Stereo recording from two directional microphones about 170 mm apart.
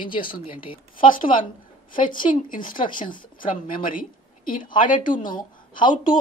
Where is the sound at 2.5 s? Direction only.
50° left (ahead or behind).